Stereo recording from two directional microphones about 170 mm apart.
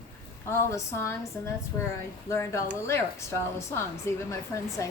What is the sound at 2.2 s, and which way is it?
Speech, 15° left (ahead or behind).